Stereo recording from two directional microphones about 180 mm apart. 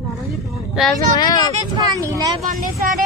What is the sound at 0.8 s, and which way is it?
Speech, 5° right (ahead or behind).